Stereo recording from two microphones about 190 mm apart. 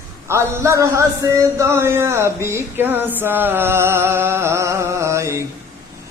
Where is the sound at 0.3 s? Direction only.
15° right (ahead or behind).